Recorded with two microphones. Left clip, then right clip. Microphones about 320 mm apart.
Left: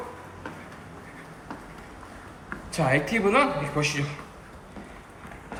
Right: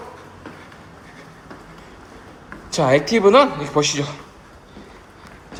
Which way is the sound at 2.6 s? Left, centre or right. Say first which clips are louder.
Right 8 dB; centre.